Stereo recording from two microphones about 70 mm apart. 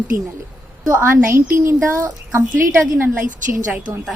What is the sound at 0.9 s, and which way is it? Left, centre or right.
A woman's voice, right.